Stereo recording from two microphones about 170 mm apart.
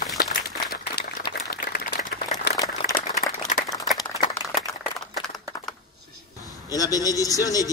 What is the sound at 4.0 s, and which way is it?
Clapping, 20° left (ahead or behind).